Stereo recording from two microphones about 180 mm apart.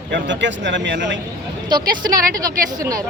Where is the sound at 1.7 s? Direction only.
20° right (ahead or behind).